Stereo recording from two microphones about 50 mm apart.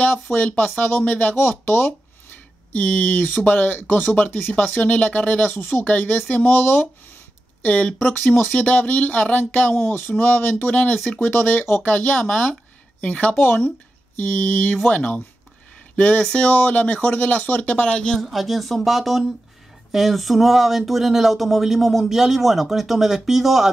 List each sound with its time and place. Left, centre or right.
0.0 s speech: left
1.3 s speech: left
5.5 s speech: left
7.6 s speech: left
9.8 s speech: left
10.7 s speech: left
13.7 s speech: left
17.8 s speech: centre
18.2 s speech: centre